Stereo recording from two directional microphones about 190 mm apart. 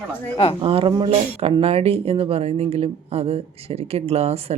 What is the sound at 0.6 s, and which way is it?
Speech, 30° right (ahead or behind).